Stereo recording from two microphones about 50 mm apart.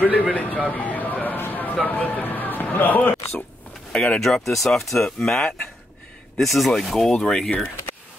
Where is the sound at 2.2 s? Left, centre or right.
Left.